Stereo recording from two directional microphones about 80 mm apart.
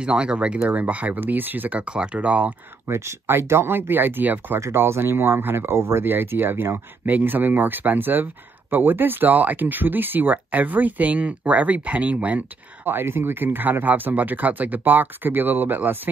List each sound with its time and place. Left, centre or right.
0.0 s speech: centre
2.9 s speech: right
4.6 s speech: right